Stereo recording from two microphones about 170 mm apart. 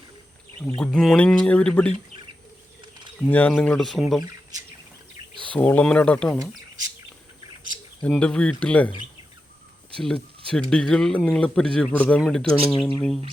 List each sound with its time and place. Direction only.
0.8 s speech: 5° left (ahead or behind)
3.2 s speech: 10° left (ahead or behind)
5.3 s bird: 30° right (ahead or behind)
5.5 s speech: 10° left (ahead or behind)
8.0 s speech: 5° left (ahead or behind)
9.9 s speech: 5° left (ahead or behind)